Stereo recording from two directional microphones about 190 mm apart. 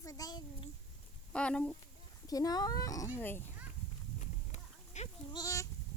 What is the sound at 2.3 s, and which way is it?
Speech, 20° left (ahead or behind).